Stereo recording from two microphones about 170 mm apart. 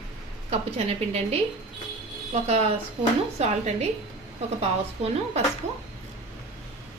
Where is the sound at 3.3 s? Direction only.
40° right (ahead or behind).